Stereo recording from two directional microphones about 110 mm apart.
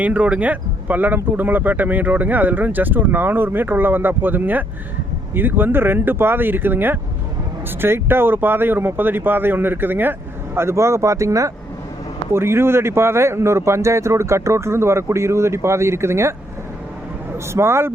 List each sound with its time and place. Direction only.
0.0 s a man's voice: 15° right (ahead or behind)
17.3 s a man's voice: 25° right (ahead or behind)